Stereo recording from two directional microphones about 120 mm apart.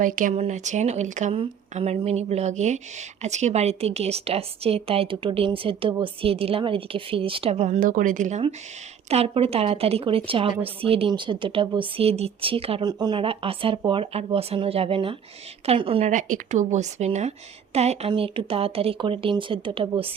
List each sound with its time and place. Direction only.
0.0 s speech: 80° right
1.7 s a woman's voice: 65° right (ahead or behind); by 8.4 s 90° right
9.0 s a woman's voice: 55° right (ahead or behind)
11.1 s a woman's voice: 40° right (ahead or behind)
12.8 s a woman's voice: 35° right (ahead or behind); by 16.0 s 50° right (ahead or behind)
16.0 s speech: 90° right; by 18.1 s 60° right (ahead or behind)
18.1 s a woman's voice: 50° right (ahead or behind)